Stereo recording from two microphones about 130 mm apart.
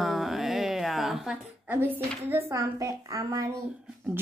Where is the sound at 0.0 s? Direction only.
Centre (ahead or behind).